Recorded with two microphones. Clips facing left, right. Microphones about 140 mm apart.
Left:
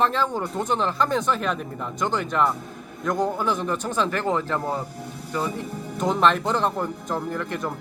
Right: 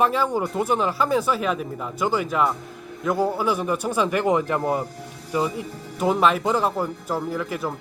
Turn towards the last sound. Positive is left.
turn(degrees=-5)  # may be behind; listen again after turning